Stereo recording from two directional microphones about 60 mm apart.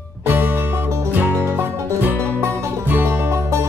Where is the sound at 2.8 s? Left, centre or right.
Right.